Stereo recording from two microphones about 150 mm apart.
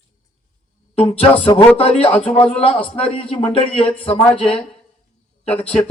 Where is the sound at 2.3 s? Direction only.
35° left (ahead or behind).